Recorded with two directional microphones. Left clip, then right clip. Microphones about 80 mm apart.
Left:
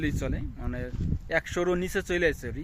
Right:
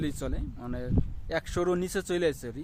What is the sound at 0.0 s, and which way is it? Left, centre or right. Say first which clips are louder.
Speech: left 2 dB; right.